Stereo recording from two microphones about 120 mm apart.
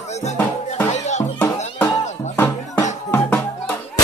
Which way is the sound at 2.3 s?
15° left (ahead or behind).